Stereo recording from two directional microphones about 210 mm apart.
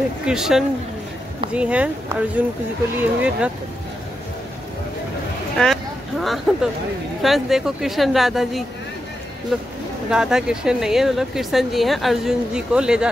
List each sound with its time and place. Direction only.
0.3 s speech: centre (ahead or behind)
5.6 s speech: centre (ahead or behind)